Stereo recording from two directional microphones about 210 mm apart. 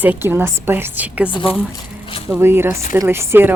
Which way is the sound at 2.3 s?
10° right (ahead or behind).